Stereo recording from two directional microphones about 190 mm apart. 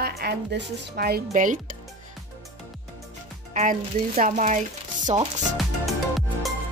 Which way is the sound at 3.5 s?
45° right (ahead or behind).